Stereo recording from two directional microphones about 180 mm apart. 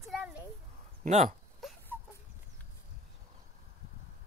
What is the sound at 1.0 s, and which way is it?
Speech, 35° right (ahead or behind).